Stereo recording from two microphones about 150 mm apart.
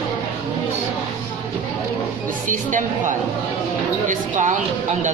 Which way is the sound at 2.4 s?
60° right (ahead or behind).